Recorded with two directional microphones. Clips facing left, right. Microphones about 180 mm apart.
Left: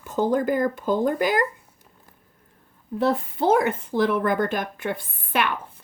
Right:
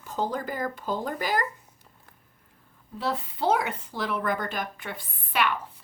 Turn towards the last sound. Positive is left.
turn(degrees=50)  # may be behind; listen again after turning